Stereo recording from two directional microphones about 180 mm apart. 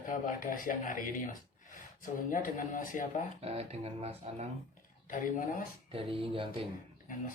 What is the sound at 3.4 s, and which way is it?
Speech, 35° right (ahead or behind).